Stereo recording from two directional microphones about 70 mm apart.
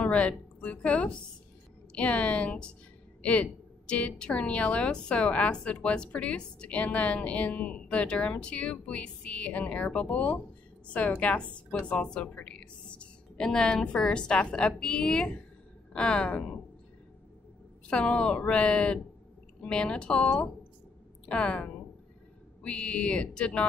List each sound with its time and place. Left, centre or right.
0.0 s a woman's voice: centre
17.8 s a woman's voice: centre